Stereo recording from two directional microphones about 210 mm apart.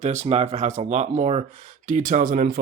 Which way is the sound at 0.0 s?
30° right (ahead or behind).